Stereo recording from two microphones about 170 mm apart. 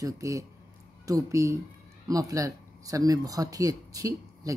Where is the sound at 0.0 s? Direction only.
20° right (ahead or behind).